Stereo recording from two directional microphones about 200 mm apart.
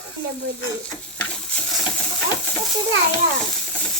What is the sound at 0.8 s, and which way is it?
Stir, 5° left (ahead or behind).